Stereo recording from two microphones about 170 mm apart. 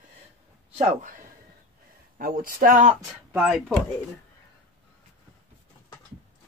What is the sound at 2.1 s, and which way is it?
Speech, 55° right (ahead or behind).